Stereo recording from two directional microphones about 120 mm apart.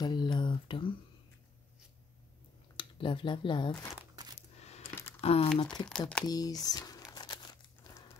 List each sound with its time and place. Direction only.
0.0 s a sound: 35° left (ahead or behind)
2.8 s speech: 45° left (ahead or behind)
4.1 s coin: 30° right (ahead or behind)
4.4 s coin: 65° left (ahead or behind)
5.2 s speech: 55° left (ahead or behind)
5.6 s speech: 35° left (ahead or behind)
5.9 s speech: 10° left (ahead or behind)
6.2 s speech: 30° left (ahead or behind)
7.2 s crumpling: 35° left (ahead or behind)